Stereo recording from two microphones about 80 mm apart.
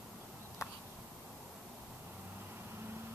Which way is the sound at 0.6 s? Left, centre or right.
Left.